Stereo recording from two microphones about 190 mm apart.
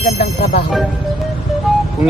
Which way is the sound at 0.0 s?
35° left (ahead or behind).